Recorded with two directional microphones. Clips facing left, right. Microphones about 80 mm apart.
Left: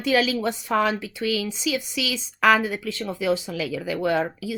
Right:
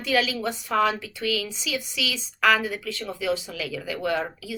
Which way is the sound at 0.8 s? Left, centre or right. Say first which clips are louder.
Right 3 dB; left.